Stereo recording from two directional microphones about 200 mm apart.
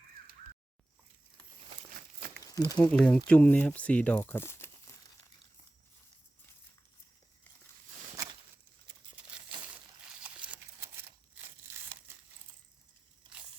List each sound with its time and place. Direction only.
1.9 s crumpling: 50° right (ahead or behind)
2.4 s crumpling: 20° left (ahead or behind)
2.9 s speech: 5° left (ahead or behind)
10.2 s a sound: 5° right (ahead or behind)